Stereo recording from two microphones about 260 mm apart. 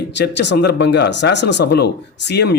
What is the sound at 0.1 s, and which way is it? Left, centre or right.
Speech, left.